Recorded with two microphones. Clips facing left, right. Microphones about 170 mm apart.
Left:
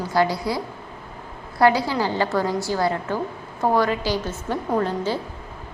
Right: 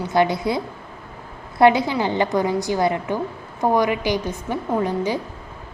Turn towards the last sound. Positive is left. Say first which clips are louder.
# right 1 dB
turn(degrees=-15)  # may be behind; listen again after turning